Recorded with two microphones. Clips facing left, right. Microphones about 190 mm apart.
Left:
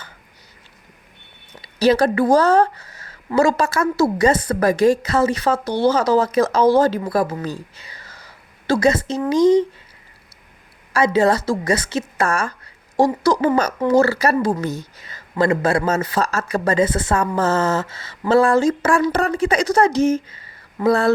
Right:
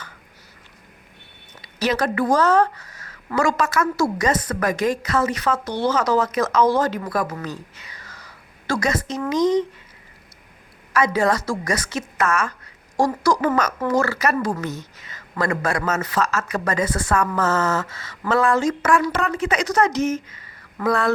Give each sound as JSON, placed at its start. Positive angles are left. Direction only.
{"t": 1.6, "sound": "a woman's voice", "side_deg": 30}
{"t": 10.9, "sound": "a woman's voice", "side_deg": 25}
{"t": 14.3, "sound": "speech", "side_deg": 20}
{"t": 14.6, "sound": "speech", "side_deg": 35}